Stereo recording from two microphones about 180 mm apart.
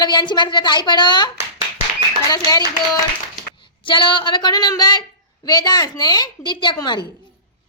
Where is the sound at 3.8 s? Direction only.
25° left (ahead or behind).